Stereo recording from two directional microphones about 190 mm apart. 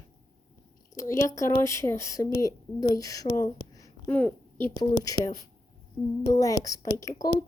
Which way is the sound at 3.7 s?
20° left (ahead or behind).